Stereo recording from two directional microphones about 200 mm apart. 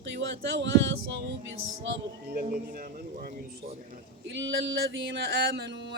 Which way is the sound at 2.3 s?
50° right (ahead or behind).